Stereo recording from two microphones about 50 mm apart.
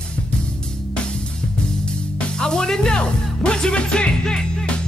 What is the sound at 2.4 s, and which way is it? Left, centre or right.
Music, centre.